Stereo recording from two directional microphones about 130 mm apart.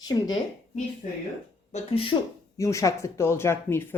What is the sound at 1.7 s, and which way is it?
Speech, 45° left (ahead or behind).